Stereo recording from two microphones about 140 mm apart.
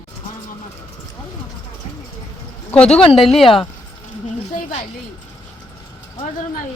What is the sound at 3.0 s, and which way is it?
Speech, 40° left (ahead or behind).